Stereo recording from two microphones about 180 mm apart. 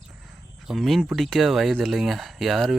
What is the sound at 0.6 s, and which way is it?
Speech, centre (ahead or behind).